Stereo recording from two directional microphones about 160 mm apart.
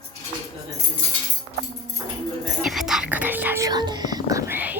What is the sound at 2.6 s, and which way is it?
Speech, centre (ahead or behind).